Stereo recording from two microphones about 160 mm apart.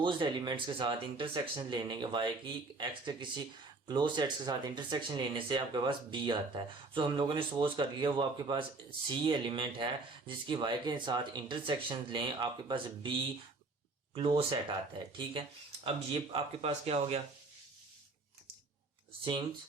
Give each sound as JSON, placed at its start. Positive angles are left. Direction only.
{"t": 0.0, "sound": "speech", "side_deg": -30}